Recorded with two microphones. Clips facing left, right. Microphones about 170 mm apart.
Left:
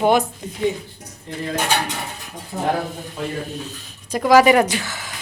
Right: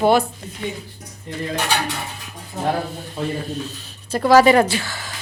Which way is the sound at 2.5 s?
60° left (ahead or behind).